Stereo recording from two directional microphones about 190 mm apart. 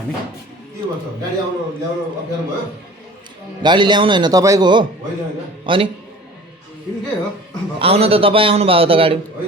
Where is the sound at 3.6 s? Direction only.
25° right (ahead or behind).